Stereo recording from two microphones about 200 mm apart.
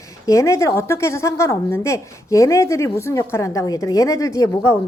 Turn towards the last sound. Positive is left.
turn(degrees=15)  # may be behind; listen again after turning